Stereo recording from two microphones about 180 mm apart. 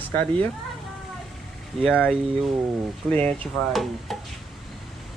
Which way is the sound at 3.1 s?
5° left (ahead or behind).